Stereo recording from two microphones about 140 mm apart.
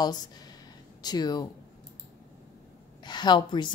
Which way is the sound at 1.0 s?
30° left (ahead or behind).